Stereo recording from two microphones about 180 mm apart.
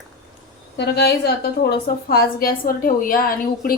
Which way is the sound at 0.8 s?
65° left (ahead or behind).